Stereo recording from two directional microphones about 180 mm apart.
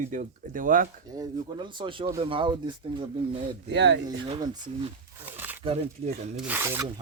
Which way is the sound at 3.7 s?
75° right (ahead or behind).